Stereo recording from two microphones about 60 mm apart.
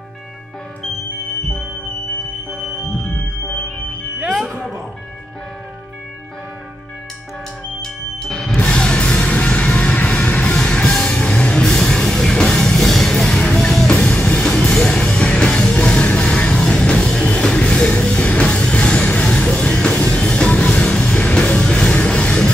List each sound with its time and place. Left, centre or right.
4.2 s music: centre
8.5 s music: centre